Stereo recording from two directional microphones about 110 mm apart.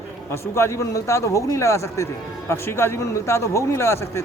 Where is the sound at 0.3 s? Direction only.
25° left (ahead or behind).